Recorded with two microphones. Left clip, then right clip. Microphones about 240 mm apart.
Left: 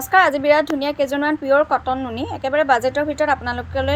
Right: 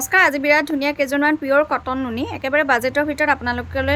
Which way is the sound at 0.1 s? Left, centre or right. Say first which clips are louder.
Left 1 dB; centre.